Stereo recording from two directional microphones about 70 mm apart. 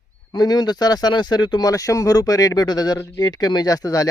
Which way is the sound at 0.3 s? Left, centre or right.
Left.